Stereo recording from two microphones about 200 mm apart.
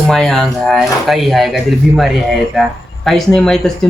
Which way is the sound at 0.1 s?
Centre (ahead or behind).